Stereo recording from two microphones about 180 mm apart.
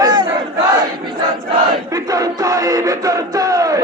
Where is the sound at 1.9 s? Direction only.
20° right (ahead or behind).